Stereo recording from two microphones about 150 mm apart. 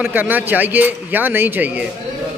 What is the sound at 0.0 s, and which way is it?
A man's voice, 10° right (ahead or behind).